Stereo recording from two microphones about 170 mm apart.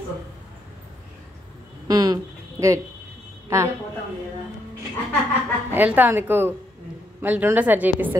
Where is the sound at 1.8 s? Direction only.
20° right (ahead or behind).